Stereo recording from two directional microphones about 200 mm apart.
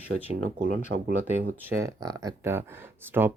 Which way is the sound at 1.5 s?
10° right (ahead or behind).